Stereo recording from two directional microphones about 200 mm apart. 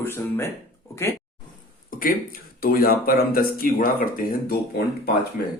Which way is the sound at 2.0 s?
45° left (ahead or behind).